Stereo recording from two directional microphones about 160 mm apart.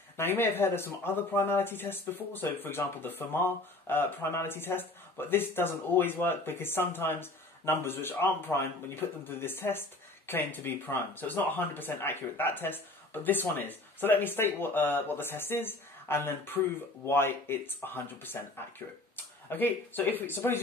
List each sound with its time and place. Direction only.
0.2 s speech: 15° left (ahead or behind)